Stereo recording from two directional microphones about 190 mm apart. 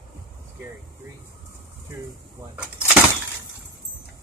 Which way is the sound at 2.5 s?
5° right (ahead or behind).